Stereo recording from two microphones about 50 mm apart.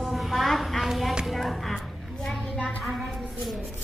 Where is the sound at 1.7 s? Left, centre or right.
Centre.